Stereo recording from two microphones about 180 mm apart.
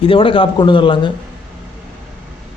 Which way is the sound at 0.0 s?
30° left (ahead or behind).